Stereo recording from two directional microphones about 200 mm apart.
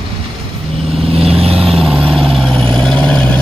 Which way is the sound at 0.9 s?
30° right (ahead or behind).